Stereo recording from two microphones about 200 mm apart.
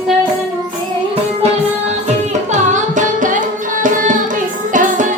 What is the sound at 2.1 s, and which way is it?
Music, 35° right (ahead or behind).